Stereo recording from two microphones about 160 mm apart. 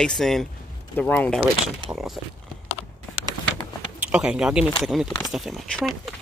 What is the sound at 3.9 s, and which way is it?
Speech, 10° right (ahead or behind).